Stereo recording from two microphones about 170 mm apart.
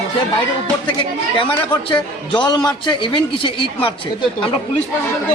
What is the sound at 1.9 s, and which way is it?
A woman's voice, 25° left (ahead or behind).